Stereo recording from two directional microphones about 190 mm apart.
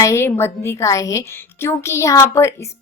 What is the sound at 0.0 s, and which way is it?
A woman's voice, 15° left (ahead or behind).